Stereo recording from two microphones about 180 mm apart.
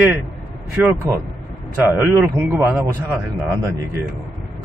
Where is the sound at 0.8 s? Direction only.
5° right (ahead or behind).